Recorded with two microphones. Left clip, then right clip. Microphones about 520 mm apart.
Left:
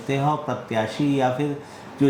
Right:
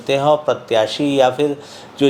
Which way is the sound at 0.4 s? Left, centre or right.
Right.